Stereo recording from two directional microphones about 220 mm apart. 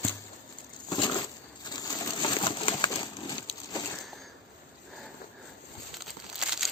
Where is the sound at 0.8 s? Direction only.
20° left (ahead or behind).